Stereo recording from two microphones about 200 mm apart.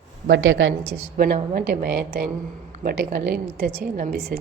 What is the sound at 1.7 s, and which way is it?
A woman's voice, 50° right (ahead or behind).